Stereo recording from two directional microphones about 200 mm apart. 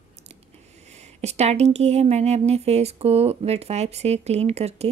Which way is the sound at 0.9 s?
35° right (ahead or behind).